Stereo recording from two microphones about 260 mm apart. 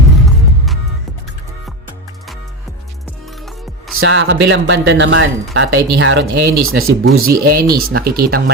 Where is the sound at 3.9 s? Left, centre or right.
Right.